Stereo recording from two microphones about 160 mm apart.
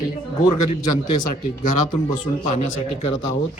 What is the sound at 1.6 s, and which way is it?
Speech, 50° left (ahead or behind).